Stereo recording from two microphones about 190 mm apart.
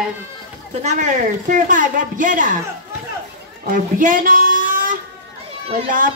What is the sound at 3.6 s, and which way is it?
A woman's voice, 45° right (ahead or behind).